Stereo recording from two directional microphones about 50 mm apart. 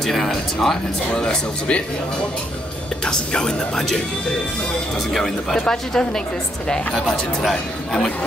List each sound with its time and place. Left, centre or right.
0.0 s speech: centre
1.2 s speech: centre
3.1 s speech: centre
5.1 s speech: centre